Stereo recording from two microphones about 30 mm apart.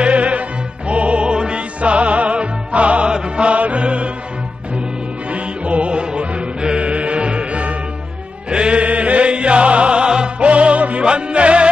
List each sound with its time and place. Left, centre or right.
0.0 s music: right
1.8 s music: right
3.1 s music: right
5.3 s music: right
5.9 s music: right
8.8 s chant: right
9.3 s music: right
10.4 s music: right
11.1 s music: right